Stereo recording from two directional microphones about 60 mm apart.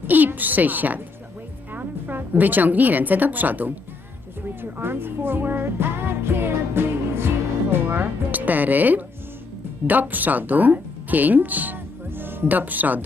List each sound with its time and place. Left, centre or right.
0.1 s a woman's voice: right
4.8 s music: right
7.7 s speech: right